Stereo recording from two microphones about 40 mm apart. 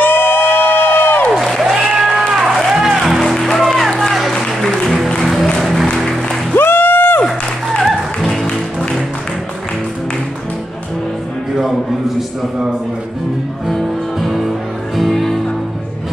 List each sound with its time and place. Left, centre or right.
0.0 s crowd: left
1.3 s applause: centre
1.7 s a sound: centre
2.7 s music: centre
3.3 s music: centre
5.2 s music: centre
6.5 s a sound: left
14.2 s music: centre